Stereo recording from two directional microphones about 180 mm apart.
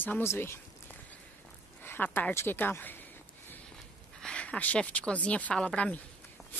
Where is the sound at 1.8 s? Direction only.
10° left (ahead or behind).